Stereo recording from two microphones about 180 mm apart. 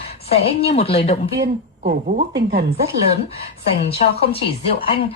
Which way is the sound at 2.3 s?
65° right (ahead or behind).